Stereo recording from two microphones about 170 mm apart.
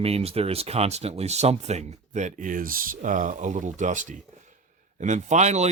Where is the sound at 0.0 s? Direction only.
35° right (ahead or behind).